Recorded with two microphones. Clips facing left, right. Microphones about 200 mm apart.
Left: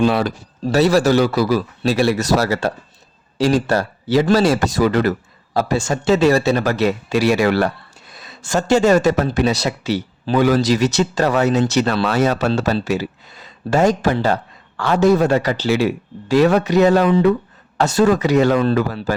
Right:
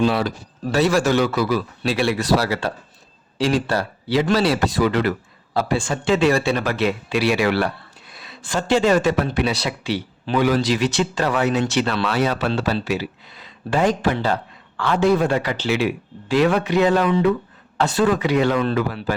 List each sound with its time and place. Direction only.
0.0 s speech: 50° left (ahead or behind)
0.7 s speech: 35° left (ahead or behind)